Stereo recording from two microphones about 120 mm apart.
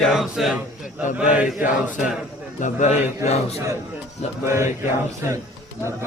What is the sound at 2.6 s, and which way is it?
Speech, 90° left.